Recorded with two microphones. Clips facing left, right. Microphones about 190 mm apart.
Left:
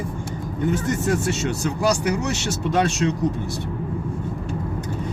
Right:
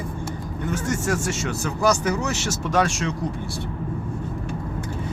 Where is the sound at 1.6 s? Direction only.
15° left (ahead or behind).